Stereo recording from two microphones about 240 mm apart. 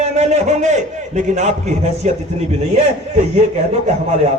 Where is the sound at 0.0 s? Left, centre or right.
Right.